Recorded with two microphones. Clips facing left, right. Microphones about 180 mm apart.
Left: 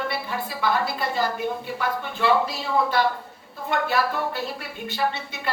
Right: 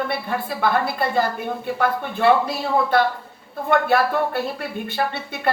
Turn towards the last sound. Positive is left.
turn(degrees=-55)  # may be behind; listen again after turning